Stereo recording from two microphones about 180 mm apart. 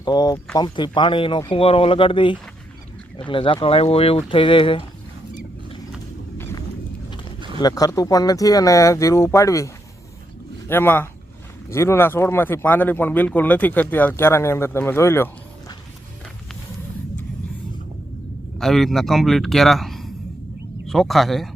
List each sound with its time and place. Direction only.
0.0 s speech: 25° left (ahead or behind)
6.3 s a sound: 10° left (ahead or behind)
7.6 s speech: 20° left (ahead or behind)
10.7 s speech: 10° left (ahead or behind)
18.6 s a man's voice: centre (ahead or behind)